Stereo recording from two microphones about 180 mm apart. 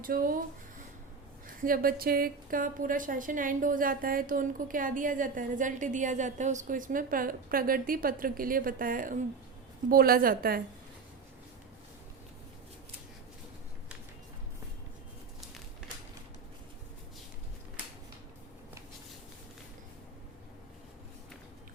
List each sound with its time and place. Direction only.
0.0 s a woman's voice: 50° right (ahead or behind)
1.6 s a woman's voice: 55° right (ahead or behind)